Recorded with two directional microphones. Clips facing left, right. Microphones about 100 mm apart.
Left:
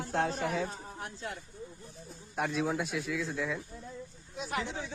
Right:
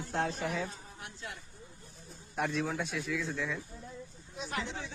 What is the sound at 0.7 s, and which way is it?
Speech, 40° left (ahead or behind).